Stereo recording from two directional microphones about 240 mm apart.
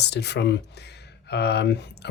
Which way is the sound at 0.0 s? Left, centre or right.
Left.